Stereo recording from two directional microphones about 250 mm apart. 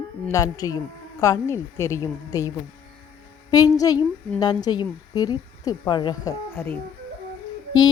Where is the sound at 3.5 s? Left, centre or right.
Centre.